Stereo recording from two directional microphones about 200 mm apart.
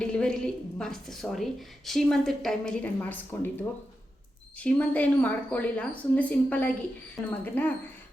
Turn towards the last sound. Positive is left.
turn(degrees=10)  # may be behind; listen again after turning